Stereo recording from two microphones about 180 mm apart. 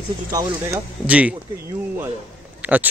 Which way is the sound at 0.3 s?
20° right (ahead or behind).